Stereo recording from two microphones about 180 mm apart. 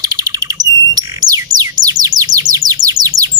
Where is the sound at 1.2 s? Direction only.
20° right (ahead or behind).